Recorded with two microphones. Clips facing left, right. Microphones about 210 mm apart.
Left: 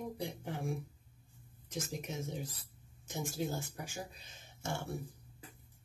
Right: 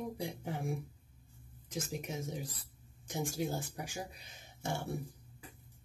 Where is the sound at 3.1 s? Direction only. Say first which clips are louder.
Right 2 dB; 15° right (ahead or behind).